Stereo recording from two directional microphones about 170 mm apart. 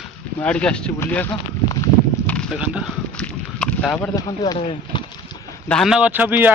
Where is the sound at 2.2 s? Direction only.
5° left (ahead or behind).